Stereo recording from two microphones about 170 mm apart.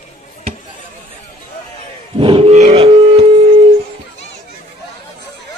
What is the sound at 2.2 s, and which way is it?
Grunt, 35° right (ahead or behind).